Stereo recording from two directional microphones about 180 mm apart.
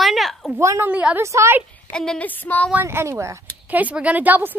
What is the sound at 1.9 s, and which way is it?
Speech, 5° left (ahead or behind).